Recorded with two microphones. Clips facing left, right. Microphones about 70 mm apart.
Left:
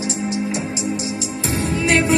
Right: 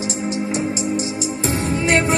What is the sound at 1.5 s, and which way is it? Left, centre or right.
Music, right.